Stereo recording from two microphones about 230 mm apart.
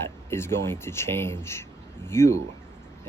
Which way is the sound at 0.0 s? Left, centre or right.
Centre.